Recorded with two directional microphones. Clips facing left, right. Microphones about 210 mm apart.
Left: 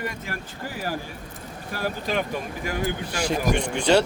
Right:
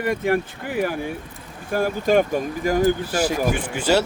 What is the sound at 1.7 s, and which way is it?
Speech, 45° right (ahead or behind).